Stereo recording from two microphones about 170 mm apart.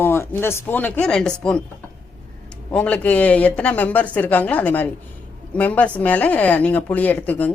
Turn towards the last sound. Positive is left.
turn(degrees=10)  # may be behind; listen again after turning